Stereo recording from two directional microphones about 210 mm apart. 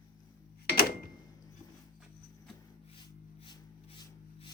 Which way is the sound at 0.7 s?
45° left (ahead or behind).